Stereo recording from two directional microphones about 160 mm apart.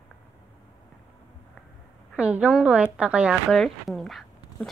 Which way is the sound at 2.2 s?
10° right (ahead or behind).